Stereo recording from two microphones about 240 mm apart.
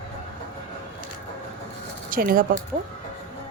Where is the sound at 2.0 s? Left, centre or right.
Right.